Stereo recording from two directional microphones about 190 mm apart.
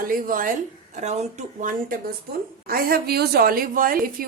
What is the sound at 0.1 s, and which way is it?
A woman's voice, 45° right (ahead or behind).